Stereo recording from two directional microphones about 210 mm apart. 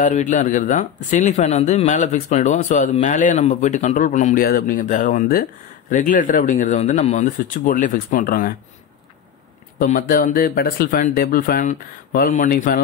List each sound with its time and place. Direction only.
0.0 s speech: 35° left (ahead or behind)
9.8 s speech: 40° left (ahead or behind)